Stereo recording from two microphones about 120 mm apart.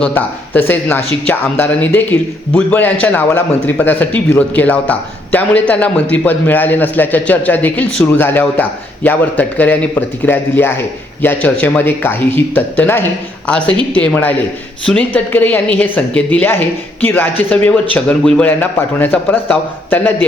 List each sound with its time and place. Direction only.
0.0 s a woman's voice: 15° left (ahead or behind)